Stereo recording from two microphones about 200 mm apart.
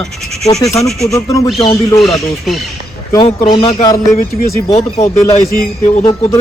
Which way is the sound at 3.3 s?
25° left (ahead or behind).